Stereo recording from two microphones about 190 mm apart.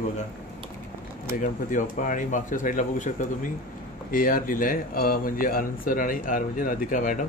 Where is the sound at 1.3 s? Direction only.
45° left (ahead or behind).